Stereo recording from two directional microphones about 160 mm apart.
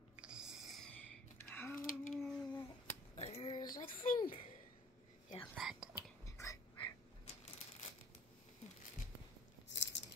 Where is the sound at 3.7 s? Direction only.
60° left (ahead or behind).